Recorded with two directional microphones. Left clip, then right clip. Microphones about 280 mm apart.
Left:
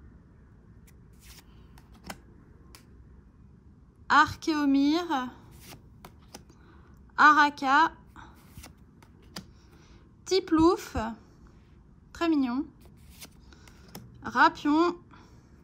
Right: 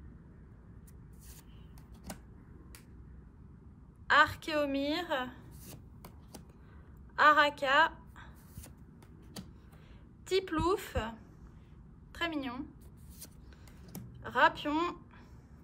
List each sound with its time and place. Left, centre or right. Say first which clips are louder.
4.1 s a woman's voice: left 4 dB; centre
7.2 s a woman's voice: left 5 dB; left
10.2 s a woman's voice: left 8 dB; centre
14.2 s a woman's voice: left 5 dB; left